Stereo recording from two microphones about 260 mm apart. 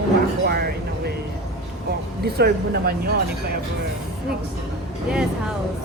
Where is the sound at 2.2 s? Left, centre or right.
Right.